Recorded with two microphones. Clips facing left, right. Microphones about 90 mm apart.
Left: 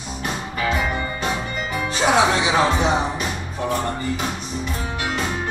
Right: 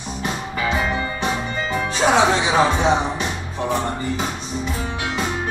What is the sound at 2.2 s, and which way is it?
Speech, 20° right (ahead or behind).